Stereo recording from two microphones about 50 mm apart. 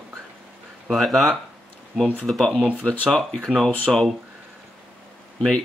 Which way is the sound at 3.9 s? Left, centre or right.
Centre.